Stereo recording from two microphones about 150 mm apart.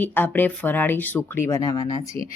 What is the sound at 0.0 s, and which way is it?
Speech, 10° left (ahead or behind).